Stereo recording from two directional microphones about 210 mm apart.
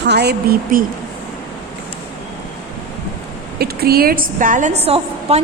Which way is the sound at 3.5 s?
45° right (ahead or behind).